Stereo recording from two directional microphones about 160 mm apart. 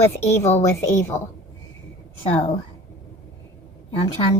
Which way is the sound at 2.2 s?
40° left (ahead or behind).